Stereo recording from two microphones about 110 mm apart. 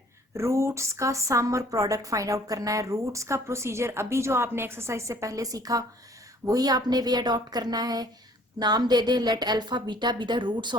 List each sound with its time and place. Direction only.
0.3 s a woman's voice: 25° right (ahead or behind); by 10.8 s 45° right (ahead or behind)